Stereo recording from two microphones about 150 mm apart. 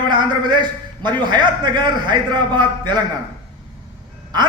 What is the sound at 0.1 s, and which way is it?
A man's voice, 30° right (ahead or behind).